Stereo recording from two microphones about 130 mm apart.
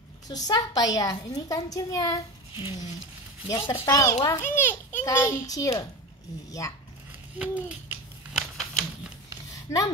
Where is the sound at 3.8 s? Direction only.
25° left (ahead or behind).